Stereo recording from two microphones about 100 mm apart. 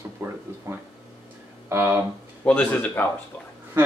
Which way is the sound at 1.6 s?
25° right (ahead or behind).